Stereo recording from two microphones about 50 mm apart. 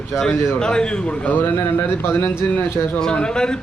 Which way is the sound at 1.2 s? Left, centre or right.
Left.